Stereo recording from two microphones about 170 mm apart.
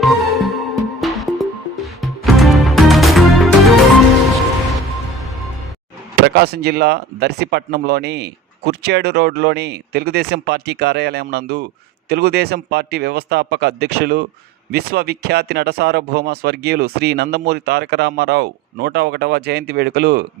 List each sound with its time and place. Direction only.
0.0 s music: centre (ahead or behind)
6.2 s speech: 70° right (ahead or behind)